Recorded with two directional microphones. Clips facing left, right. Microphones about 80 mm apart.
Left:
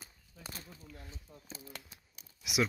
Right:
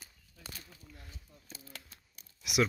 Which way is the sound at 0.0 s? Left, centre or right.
Left.